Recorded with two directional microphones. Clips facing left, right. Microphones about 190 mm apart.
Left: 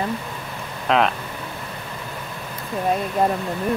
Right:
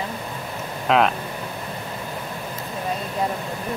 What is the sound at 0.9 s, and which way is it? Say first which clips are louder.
Speech: right 1 dB; centre (ahead or behind).